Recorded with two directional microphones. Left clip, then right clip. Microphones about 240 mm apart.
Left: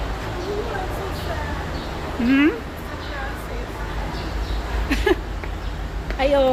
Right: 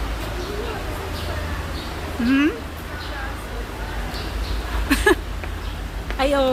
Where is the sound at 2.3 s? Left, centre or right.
Centre.